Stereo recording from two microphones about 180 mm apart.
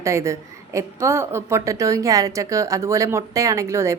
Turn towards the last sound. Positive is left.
turn(degrees=-15)  # may be behind; listen again after turning